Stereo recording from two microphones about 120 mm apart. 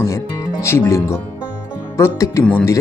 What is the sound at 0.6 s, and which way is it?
Speech, 20° left (ahead or behind).